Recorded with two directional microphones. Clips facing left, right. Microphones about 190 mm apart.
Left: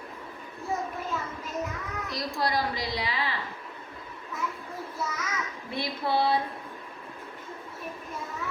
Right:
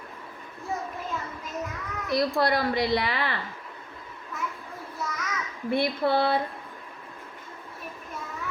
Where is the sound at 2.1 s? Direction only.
60° right (ahead or behind).